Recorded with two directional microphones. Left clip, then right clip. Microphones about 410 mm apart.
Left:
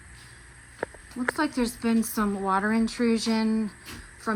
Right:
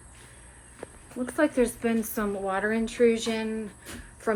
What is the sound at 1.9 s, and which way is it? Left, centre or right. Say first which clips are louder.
Speech: left 2 dB; centre.